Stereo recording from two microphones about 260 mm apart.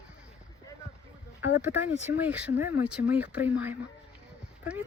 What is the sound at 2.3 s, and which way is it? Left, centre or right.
Speech, centre.